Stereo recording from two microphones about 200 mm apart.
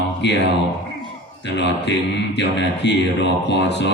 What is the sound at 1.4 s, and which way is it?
Speech, 60° left (ahead or behind).